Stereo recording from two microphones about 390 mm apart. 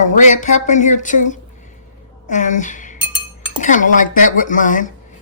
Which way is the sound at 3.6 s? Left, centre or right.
Centre.